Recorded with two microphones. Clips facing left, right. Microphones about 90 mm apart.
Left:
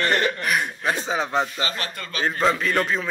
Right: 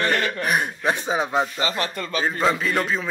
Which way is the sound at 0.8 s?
20° right (ahead or behind).